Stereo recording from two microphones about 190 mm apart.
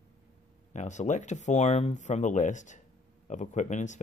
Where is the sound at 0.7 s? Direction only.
40° left (ahead or behind).